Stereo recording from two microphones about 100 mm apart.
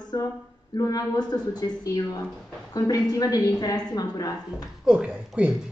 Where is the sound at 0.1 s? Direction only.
40° left (ahead or behind).